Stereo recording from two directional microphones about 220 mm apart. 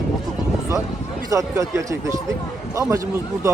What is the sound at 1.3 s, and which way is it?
Speech, 15° right (ahead or behind).